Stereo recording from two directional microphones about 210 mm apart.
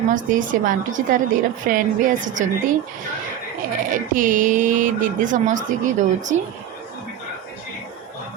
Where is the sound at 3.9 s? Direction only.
40° right (ahead or behind).